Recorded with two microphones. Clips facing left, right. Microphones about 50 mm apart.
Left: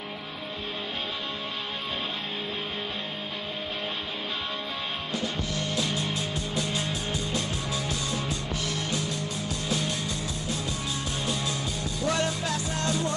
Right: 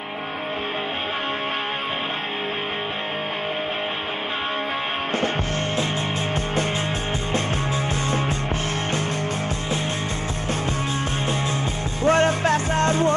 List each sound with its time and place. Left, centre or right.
12.0 s music: right